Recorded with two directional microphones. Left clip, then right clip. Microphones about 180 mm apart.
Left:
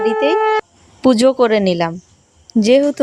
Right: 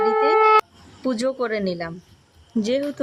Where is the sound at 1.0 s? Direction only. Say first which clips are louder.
Left 12 dB; 35° left (ahead or behind).